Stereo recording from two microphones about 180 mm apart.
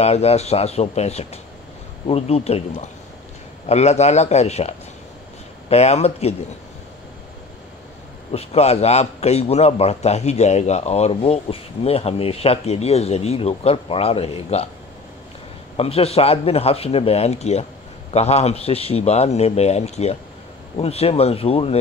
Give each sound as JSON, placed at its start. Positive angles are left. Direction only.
{"t": 0.0, "sound": "a man's voice", "side_deg": 35}
{"t": 8.3, "sound": "a man's voice", "side_deg": 35}
{"t": 15.8, "sound": "a man's voice", "side_deg": 35}